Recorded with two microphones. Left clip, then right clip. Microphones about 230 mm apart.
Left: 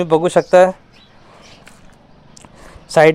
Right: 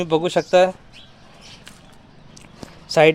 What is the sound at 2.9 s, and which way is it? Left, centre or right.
Speech, left.